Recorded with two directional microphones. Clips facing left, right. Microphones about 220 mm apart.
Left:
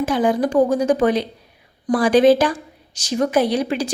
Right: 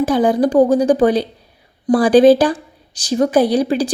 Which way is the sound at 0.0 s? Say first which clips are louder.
Right 4 dB; 35° right (ahead or behind).